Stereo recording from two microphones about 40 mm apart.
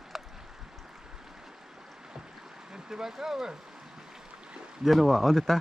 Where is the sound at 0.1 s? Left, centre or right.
Centre.